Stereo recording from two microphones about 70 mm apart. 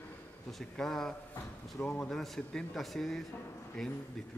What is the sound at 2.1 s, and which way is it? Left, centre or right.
A man's voice, centre.